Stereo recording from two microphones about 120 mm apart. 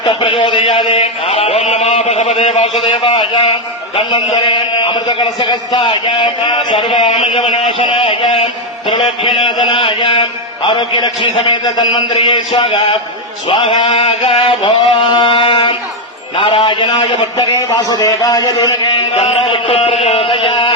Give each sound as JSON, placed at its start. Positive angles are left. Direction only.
{"t": 0.0, "sound": "a man's voice", "side_deg": 45}
{"t": 2.9, "sound": "a man's voice", "side_deg": 50}
{"t": 19.2, "sound": "a man's voice", "side_deg": 50}